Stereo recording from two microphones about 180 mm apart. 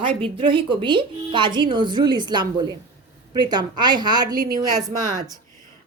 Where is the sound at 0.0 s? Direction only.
30° right (ahead or behind).